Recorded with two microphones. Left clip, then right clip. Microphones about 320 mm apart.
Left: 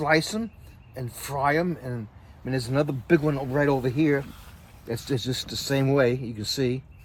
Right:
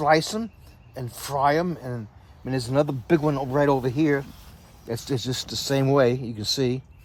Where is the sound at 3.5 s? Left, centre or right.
Centre.